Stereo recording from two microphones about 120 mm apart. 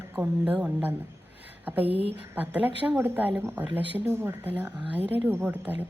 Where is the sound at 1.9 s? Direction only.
50° right (ahead or behind).